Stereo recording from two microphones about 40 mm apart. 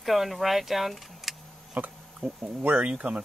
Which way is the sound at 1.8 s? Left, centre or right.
Right.